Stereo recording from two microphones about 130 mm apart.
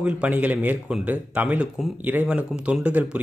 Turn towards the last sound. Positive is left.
turn(degrees=-10)  # may be behind; listen again after turning